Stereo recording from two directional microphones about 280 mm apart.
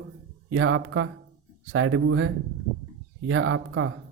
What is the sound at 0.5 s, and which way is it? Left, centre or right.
Speech, right.